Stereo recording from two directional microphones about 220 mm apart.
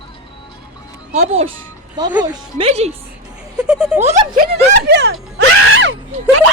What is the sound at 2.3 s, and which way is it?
Speech, 25° right (ahead or behind).